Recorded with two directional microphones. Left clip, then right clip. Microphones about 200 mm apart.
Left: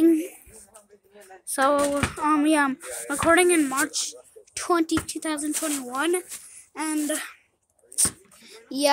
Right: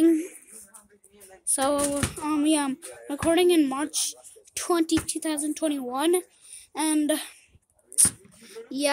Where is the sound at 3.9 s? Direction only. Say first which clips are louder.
Even; 5° right (ahead or behind).